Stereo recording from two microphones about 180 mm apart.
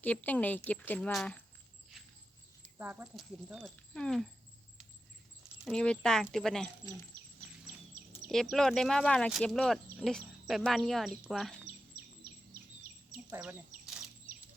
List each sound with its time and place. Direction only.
0.0 s speech: 10° left (ahead or behind)
2.7 s speech: 10° right (ahead or behind)
5.6 s speech: 5° left (ahead or behind)
8.3 s speech: centre (ahead or behind)
11.9 s bird: 55° right (ahead or behind)
13.3 s speech: 10° right (ahead or behind)
13.8 s a sound: 5° right (ahead or behind)